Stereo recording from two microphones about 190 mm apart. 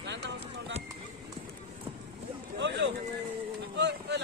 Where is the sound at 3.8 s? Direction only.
65° right (ahead or behind).